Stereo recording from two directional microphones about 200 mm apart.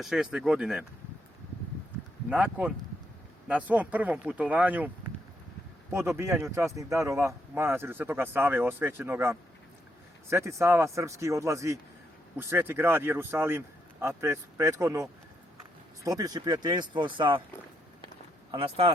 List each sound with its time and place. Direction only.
0.0 s speech: centre (ahead or behind)
2.3 s speech: 5° right (ahead or behind)
5.9 s speech: 15° right (ahead or behind)
18.5 s speech: 25° right (ahead or behind)